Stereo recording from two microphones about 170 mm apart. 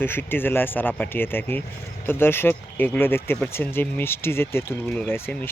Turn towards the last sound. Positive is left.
turn(degrees=10)  # may be behind; listen again after turning